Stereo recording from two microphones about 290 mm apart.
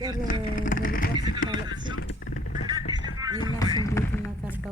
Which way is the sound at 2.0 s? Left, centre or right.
Left.